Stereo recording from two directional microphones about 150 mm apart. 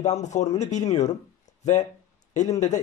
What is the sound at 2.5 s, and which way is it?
Speech, 50° left (ahead or behind).